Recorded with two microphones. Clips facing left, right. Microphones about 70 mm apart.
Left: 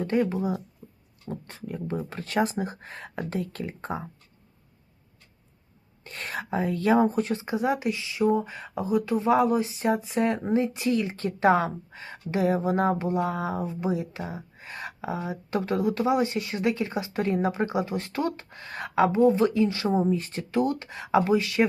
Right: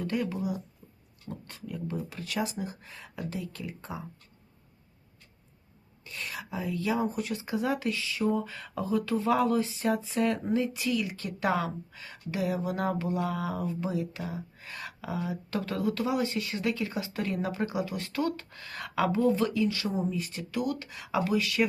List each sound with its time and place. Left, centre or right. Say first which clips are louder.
0.0 s speech: left 6 dB; left
0.8 s a sound: left 6 dB; left
1.3 s speech: left 4 dB; left
6.1 s speech: left 6 dB; left